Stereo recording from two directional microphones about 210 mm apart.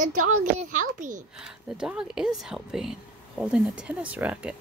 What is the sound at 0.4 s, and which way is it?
Speech, 40° right (ahead or behind).